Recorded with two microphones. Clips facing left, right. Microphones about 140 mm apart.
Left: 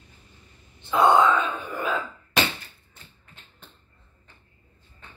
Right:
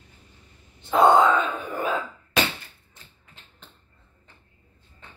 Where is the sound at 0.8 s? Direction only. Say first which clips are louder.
Right 2 dB; 45° right (ahead or behind).